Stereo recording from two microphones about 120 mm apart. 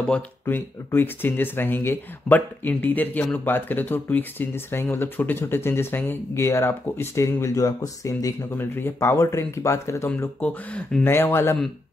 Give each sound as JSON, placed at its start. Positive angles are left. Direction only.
{"t": 0.9, "sound": "speech", "side_deg": 15}
{"t": 10.4, "sound": "speech", "side_deg": 10}
{"t": 11.1, "sound": "speech", "side_deg": 20}